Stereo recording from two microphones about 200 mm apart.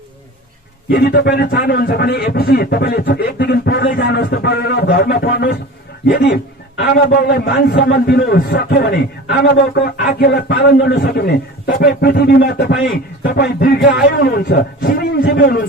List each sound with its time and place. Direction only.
0.9 s a man's voice: 50° left (ahead or behind)